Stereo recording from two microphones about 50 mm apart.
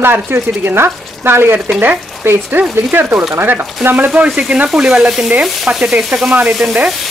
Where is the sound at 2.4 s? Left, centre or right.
Right.